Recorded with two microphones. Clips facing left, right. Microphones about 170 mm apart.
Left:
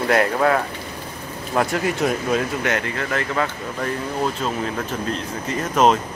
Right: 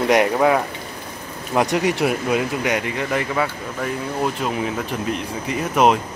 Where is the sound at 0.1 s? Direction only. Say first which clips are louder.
Right 1 dB; 15° right (ahead or behind).